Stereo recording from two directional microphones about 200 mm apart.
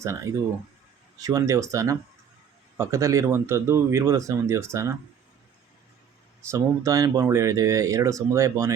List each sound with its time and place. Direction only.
1.2 s speech: 15° right (ahead or behind)
6.5 s speech: 15° right (ahead or behind)